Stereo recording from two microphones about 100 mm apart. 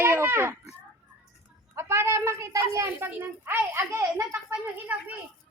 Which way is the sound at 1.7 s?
25° right (ahead or behind).